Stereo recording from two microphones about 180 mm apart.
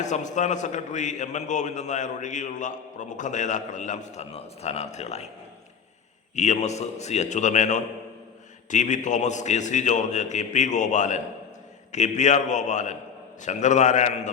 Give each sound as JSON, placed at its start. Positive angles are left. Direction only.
{"t": 0.0, "sound": "a man's voice", "side_deg": 40}
{"t": 6.3, "sound": "a man's voice", "side_deg": 40}